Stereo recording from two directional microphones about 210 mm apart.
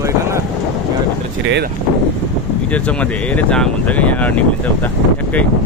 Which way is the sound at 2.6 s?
5° left (ahead or behind).